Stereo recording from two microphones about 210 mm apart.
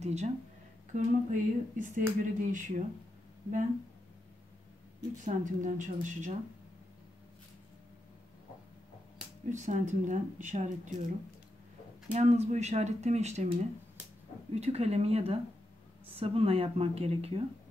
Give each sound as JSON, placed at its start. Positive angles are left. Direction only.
{"t": 0.0, "sound": "speech", "side_deg": -30}
{"t": 5.2, "sound": "speech", "side_deg": -35}
{"t": 9.5, "sound": "speech", "side_deg": -35}
{"t": 14.5, "sound": "speech", "side_deg": -30}